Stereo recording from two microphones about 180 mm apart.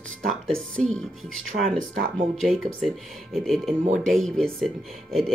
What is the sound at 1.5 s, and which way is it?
Speech, 55° right (ahead or behind).